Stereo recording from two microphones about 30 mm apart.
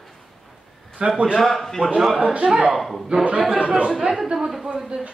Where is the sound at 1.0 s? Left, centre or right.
Right.